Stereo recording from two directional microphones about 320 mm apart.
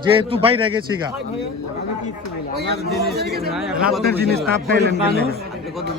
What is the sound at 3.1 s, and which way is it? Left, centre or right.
Speech, right.